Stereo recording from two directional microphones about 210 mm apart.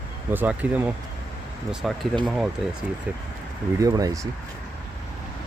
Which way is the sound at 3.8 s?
15° right (ahead or behind).